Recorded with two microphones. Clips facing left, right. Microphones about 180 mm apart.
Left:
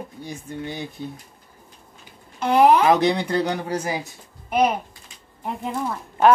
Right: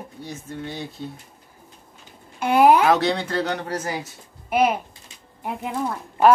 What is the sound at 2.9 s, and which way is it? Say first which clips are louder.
Speech: left 2 dB; 15° left (ahead or behind).